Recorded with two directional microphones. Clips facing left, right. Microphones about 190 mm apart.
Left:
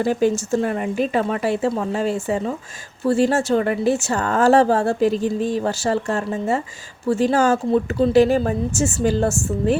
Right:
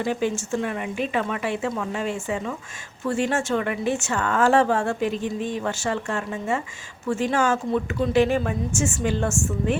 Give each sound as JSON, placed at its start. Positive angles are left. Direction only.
{"t": 0.0, "sound": "speech", "side_deg": 40}